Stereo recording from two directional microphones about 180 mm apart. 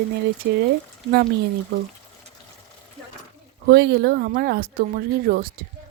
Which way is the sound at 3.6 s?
70° right (ahead or behind).